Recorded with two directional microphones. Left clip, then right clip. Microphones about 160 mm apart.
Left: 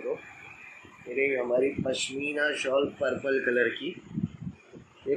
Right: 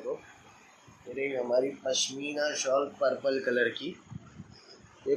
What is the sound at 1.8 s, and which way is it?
Speech, 20° left (ahead or behind).